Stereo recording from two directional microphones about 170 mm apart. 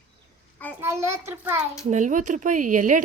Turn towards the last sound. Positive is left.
turn(degrees=-50)  # may be behind; listen again after turning